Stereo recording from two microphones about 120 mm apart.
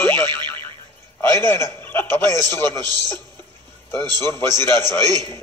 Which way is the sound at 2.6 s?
35° right (ahead or behind).